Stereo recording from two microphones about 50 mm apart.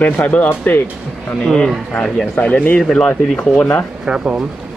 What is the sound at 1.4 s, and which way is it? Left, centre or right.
Speech, centre.